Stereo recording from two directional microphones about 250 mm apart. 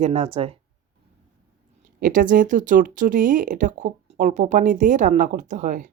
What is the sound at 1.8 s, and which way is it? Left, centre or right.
Speech, right.